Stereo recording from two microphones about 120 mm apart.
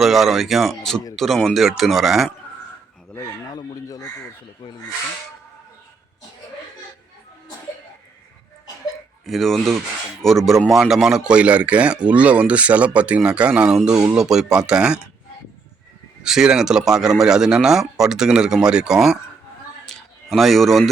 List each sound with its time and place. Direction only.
0.0 s speech: centre (ahead or behind)
3.2 s chicken: 35° left (ahead or behind)
4.6 s speech: 40° left (ahead or behind)
9.2 s speech: centre (ahead or behind)
16.2 s speech: 5° right (ahead or behind)
19.8 s a sound: centre (ahead or behind)